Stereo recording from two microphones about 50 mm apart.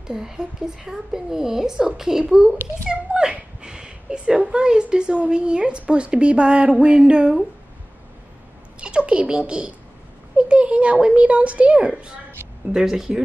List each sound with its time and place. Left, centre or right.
0.0 s a woman's voice: centre
8.8 s speech: right
12.7 s a woman's voice: centre